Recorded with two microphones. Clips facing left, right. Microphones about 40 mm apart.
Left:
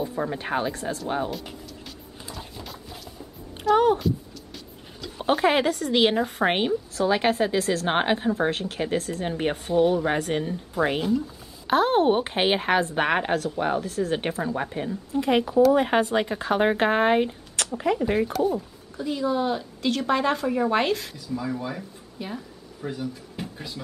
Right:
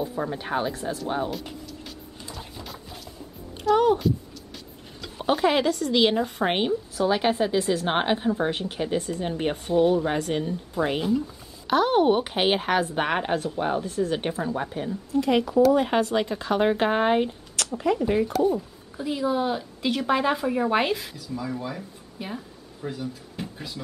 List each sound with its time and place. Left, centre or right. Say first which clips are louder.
0.0 s a woman's voice: left 1 dB; centre
2.2 s music: left 1 dB; centre
3.7 s a sound: even; centre
5.2 s a woman's voice: left 1 dB; centre
9.2 s a woman's voice: left 1 dB; centre
13.8 s a woman's voice: right 1 dB; centre
14.3 s speech: left 1 dB; centre
15.1 s speech: even; left
18.3 s a woman's voice: right 1 dB; centre
18.9 s a woman's voice: even; centre
21.4 s speech: left 1 dB; centre
22.2 s a woman's voice: even; centre
22.8 s speech: left 1 dB; centre